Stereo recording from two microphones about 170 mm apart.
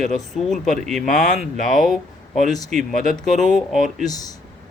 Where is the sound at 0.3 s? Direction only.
Centre (ahead or behind).